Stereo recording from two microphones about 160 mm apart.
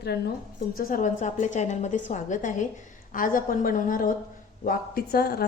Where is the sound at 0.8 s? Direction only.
60° left (ahead or behind).